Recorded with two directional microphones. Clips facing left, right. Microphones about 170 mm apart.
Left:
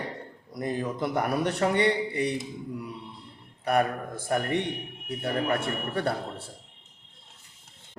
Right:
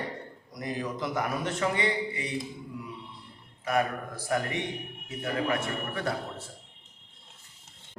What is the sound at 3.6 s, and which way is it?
Speech, 60° left (ahead or behind).